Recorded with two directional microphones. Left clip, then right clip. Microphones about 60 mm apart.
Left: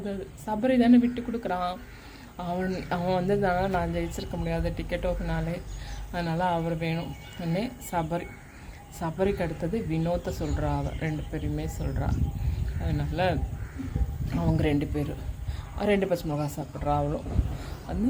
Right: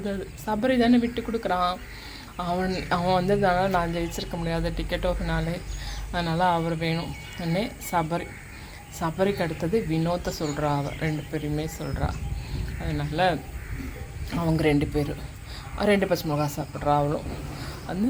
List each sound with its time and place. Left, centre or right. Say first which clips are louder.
0.0 s speech: right 4 dB; centre
3.0 s a man's voice: right 3 dB; left; by 18.0 s centre